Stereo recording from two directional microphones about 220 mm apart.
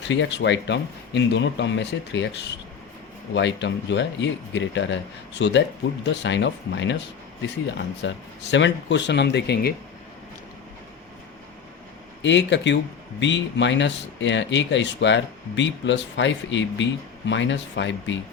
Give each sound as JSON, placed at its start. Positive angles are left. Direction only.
{"t": 0.1, "sound": "speech", "side_deg": 55}
{"t": 12.2, "sound": "speech", "side_deg": 55}